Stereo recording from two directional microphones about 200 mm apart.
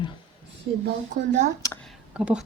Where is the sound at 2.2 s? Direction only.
5° right (ahead or behind).